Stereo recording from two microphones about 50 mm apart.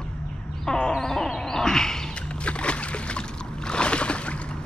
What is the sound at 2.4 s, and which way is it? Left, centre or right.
Boat, left.